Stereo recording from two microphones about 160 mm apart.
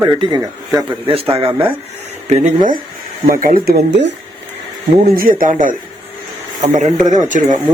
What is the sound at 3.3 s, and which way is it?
Speech, 60° right (ahead or behind).